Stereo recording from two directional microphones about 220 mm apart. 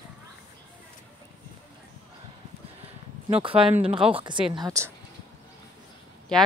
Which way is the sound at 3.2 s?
25° right (ahead or behind).